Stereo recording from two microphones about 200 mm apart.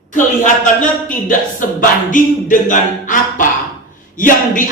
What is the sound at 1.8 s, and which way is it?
A man's voice, 40° left (ahead or behind).